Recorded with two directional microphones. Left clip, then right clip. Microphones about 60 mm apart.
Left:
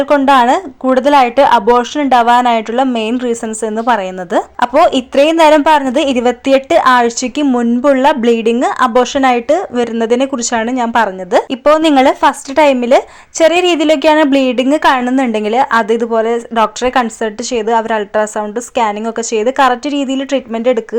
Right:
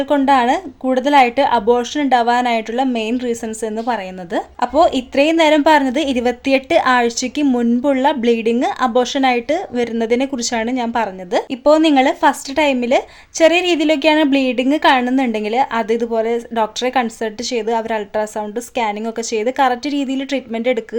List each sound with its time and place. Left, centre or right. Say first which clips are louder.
0.3 s a woman's voice: left 4 dB; left
1.7 s a woman's voice: left 5 dB; left
3.8 s a woman's voice: left 10 dB; left
7.4 s speech: left 3 dB; centre
7.8 s a woman's voice: left 9 dB; left
8.9 s a woman's voice: left 5 dB; centre
9.5 s a woman's voice: left 6 dB; left